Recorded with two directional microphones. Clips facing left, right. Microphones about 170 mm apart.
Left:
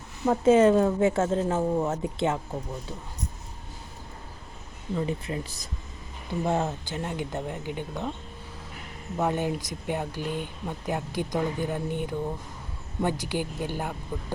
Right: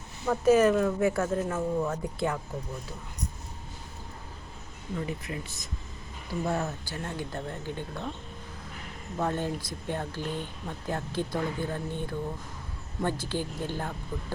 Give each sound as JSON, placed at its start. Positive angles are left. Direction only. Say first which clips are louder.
{"t": 0.3, "sound": "speech", "louder": "left 3 dB", "side_deg": 25}
{"t": 4.9, "sound": "speech", "louder": "left 5 dB", "side_deg": 30}
{"t": 9.1, "sound": "speech", "louder": "left 3 dB", "side_deg": 15}